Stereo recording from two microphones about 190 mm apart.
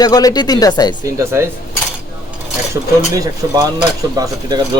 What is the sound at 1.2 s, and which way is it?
Speech, 15° right (ahead or behind).